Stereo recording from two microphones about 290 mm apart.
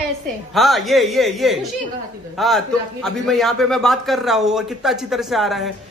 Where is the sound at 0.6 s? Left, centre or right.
Centre.